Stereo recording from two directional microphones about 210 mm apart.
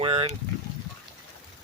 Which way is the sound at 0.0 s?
25° right (ahead or behind).